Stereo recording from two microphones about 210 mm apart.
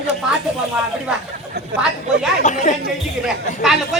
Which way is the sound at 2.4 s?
35° left (ahead or behind).